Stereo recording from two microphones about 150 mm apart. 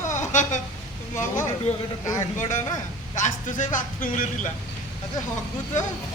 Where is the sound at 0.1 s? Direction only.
55° left (ahead or behind).